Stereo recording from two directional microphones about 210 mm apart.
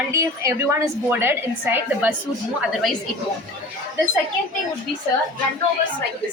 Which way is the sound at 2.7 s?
Centre (ahead or behind).